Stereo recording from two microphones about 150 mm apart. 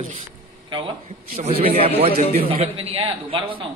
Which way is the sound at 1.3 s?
40° right (ahead or behind).